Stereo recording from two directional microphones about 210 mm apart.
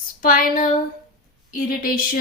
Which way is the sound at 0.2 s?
40° left (ahead or behind).